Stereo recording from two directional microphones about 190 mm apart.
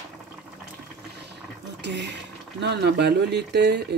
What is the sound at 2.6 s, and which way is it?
Speech, 60° right (ahead or behind).